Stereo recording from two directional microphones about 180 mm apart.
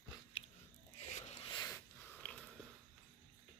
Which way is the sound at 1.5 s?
25° left (ahead or behind).